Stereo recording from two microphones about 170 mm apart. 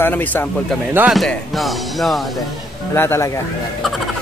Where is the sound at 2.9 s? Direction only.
15° left (ahead or behind).